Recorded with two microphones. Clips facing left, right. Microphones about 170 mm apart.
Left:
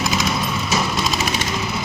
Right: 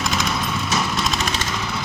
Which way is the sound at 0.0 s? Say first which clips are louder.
Left 2 dB; 5° left (ahead or behind).